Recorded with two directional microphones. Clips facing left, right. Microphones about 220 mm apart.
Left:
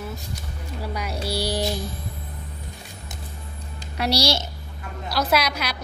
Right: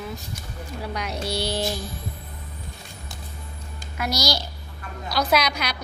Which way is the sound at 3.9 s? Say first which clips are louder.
Left 3 dB; 35° left (ahead or behind).